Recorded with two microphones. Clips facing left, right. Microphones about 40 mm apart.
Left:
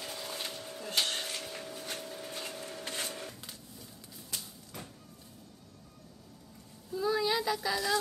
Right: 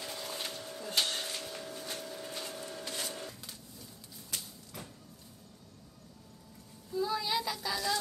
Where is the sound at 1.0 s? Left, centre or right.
Left.